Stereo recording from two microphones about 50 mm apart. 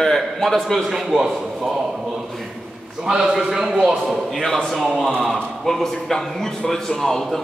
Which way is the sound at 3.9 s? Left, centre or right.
Centre.